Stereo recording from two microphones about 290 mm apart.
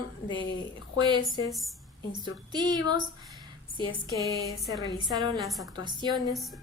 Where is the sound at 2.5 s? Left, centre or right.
Centre.